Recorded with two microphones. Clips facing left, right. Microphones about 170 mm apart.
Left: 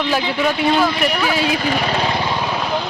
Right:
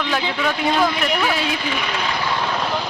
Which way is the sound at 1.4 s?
45° left (ahead or behind).